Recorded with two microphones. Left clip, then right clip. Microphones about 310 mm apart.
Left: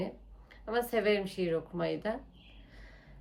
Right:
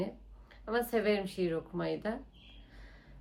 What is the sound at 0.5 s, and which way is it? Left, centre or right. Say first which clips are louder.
Speech: left 1 dB; centre.